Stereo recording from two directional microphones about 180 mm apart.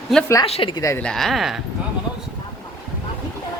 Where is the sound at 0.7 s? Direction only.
15° left (ahead or behind).